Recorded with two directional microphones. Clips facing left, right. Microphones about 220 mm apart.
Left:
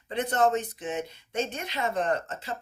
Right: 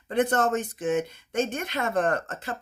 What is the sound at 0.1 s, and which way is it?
Speech, 50° right (ahead or behind).